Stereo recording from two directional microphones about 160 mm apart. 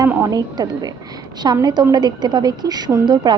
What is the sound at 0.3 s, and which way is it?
A woman's voice, 25° right (ahead or behind).